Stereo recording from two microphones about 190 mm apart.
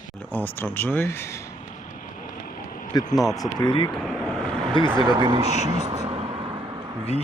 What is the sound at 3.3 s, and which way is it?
Speech, 20° left (ahead or behind).